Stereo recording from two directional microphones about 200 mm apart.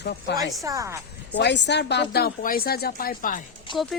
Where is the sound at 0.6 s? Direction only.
15° right (ahead or behind).